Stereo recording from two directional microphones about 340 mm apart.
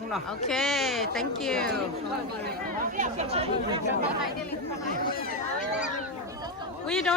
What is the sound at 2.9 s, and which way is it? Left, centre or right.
Speech, centre.